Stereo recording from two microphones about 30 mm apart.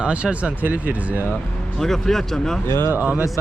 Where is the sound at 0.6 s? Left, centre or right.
Right.